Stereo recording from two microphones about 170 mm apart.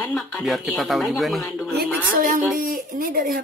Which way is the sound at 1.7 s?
55° right (ahead or behind).